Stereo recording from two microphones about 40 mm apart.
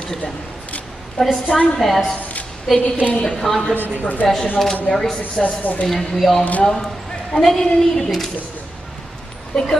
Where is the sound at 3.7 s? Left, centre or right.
Right.